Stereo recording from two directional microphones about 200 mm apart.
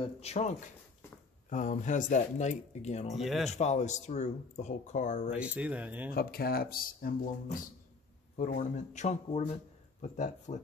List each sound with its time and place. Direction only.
0.2 s speech: 35° left (ahead or behind)
3.2 s speech: centre (ahead or behind)
3.5 s speech: 35° left (ahead or behind)
5.3 s speech: 5° right (ahead or behind)
6.1 s speech: 50° left (ahead or behind)
8.4 s speech: 40° left (ahead or behind)